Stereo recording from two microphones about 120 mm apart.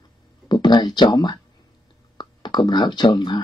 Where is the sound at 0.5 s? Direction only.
40° left (ahead or behind).